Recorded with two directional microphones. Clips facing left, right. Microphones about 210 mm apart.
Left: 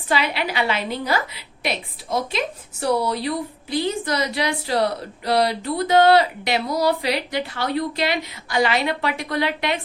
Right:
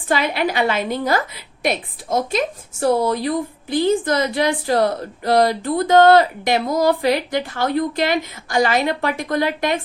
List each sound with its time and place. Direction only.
0.1 s a woman's voice: 50° right (ahead or behind)